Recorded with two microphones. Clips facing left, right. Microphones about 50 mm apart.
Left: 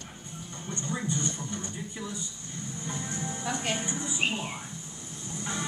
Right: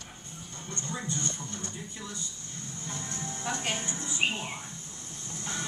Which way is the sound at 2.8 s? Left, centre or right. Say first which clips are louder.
Left 3 dB; centre.